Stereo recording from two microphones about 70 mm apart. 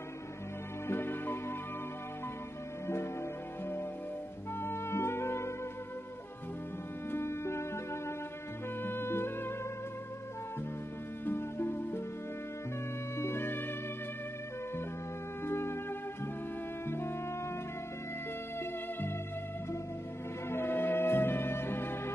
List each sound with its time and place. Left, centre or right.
0.8 s music: left
4.6 s music: left
7.1 s music: left
11.2 s music: left
13.2 s music: left
15.4 s music: left
18.6 s music: left
20.4 s music: left